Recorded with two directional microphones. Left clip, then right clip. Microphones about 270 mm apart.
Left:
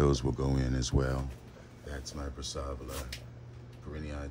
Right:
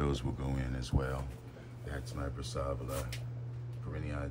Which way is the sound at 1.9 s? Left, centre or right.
Centre.